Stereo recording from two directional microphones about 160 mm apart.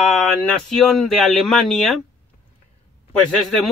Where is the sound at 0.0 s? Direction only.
Centre (ahead or behind).